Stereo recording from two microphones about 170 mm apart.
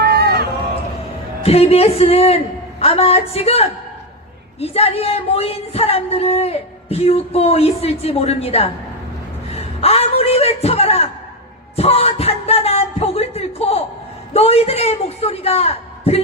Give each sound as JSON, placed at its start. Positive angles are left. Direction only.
{"t": 0.0, "sound": "run", "side_deg": -70}
{"t": 1.5, "sound": "a man's voice", "side_deg": 35}